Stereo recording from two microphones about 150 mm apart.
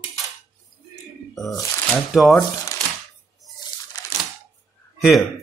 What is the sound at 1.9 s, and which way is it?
Speech, centre (ahead or behind).